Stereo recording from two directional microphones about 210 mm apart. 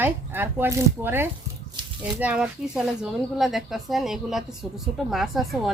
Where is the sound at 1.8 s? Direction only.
20° right (ahead or behind).